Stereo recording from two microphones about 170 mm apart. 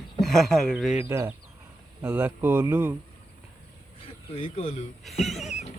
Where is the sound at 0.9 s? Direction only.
15° right (ahead or behind).